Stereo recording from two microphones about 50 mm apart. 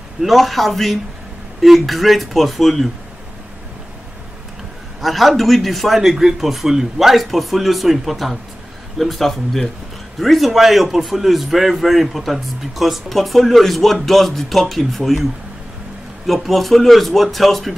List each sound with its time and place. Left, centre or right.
0.2 s speech: centre
5.0 s speech: centre
16.3 s speech: centre